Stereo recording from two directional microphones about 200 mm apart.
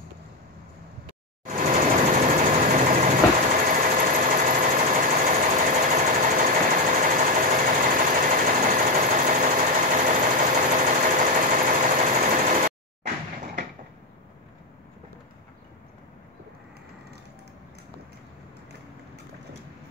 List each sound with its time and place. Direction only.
1.4 s engine: 40° right (ahead or behind)